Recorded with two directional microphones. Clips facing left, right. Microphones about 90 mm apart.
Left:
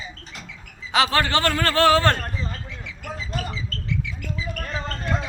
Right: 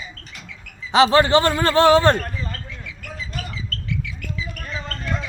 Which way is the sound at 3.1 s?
35° left (ahead or behind).